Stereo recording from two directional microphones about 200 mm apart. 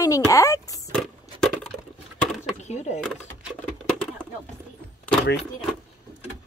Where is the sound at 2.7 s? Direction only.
35° left (ahead or behind).